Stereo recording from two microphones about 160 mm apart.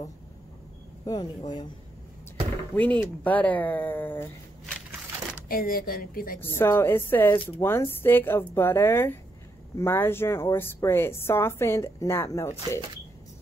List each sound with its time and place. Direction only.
1.0 s speech: 25° left (ahead or behind)
2.7 s a woman's voice: 10° left (ahead or behind)
5.5 s a woman's voice: 65° left (ahead or behind)
6.4 s a woman's voice: 15° left (ahead or behind)